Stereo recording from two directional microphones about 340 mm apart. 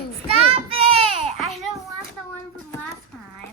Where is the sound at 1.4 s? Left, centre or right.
Centre.